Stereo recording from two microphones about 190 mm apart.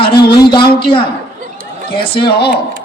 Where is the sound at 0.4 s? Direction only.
25° left (ahead or behind).